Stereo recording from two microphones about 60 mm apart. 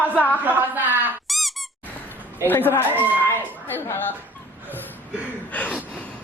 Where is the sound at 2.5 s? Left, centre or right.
Left.